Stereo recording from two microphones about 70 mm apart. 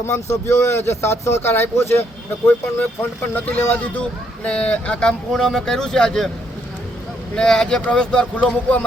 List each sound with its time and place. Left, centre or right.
0.0 s speech: left; by 6.3 s centre
7.3 s speech: centre